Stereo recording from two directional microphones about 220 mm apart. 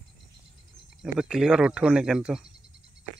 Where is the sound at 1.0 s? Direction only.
5° right (ahead or behind).